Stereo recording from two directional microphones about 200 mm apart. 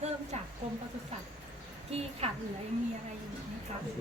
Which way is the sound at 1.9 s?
30° right (ahead or behind).